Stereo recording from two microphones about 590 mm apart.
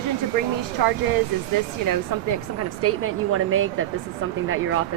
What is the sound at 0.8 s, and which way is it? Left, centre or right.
Speech, right.